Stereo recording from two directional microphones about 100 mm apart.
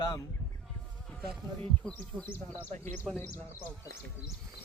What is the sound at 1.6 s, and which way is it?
Speech, 15° left (ahead or behind).